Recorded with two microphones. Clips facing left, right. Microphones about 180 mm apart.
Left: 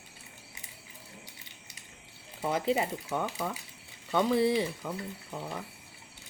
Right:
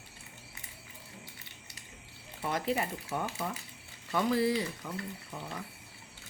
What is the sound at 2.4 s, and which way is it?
Speech, 25° left (ahead or behind).